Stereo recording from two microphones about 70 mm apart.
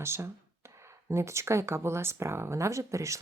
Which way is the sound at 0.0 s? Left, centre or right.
Right.